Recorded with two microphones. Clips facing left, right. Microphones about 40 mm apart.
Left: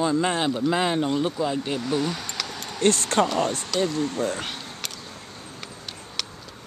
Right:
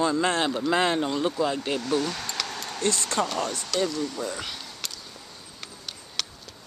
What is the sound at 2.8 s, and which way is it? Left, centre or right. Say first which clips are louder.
Speech: left 6 dB; left.